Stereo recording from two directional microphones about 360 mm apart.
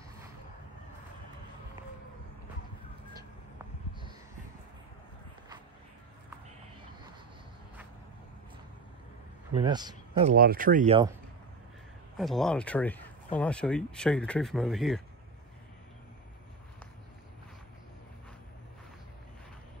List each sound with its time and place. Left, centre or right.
9.5 s a man's voice: centre
10.3 s speech: right
12.2 s speech: centre